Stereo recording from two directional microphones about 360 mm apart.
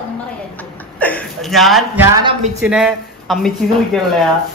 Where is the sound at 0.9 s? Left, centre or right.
Centre.